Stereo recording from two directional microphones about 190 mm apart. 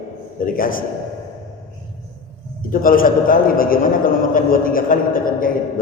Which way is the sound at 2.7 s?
45° left (ahead or behind).